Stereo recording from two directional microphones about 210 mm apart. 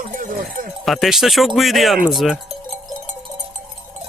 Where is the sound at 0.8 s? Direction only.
Centre (ahead or behind).